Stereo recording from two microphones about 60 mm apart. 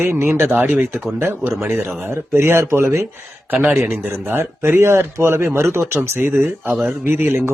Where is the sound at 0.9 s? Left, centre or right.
Centre.